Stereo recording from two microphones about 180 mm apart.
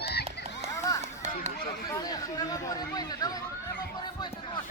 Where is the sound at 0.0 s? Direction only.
65° left (ahead or behind).